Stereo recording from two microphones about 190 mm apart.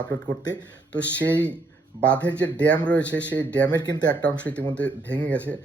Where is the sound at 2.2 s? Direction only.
5° left (ahead or behind).